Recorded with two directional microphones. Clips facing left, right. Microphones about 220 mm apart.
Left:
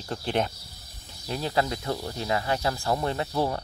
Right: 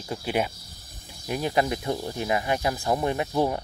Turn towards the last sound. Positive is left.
turn(degrees=-15)  # may be behind; listen again after turning